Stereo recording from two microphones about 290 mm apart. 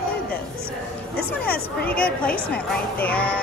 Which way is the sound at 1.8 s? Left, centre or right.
Centre.